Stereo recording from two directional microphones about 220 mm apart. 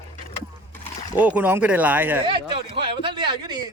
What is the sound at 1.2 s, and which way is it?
A man's voice, 5° right (ahead or behind).